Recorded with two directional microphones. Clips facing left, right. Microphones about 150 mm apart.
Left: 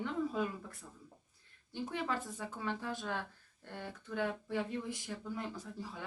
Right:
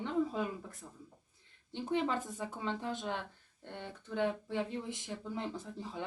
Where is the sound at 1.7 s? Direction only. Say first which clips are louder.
Right 4 dB; 25° right (ahead or behind).